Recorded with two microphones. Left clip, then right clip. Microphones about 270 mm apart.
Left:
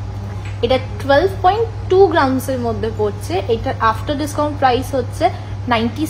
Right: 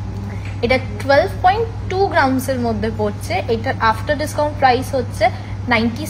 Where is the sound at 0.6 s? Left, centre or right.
Centre.